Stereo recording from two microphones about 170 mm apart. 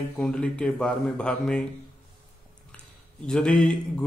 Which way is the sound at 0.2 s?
5° left (ahead or behind).